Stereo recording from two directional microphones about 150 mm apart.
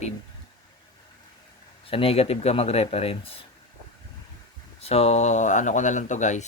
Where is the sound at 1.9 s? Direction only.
40° left (ahead or behind).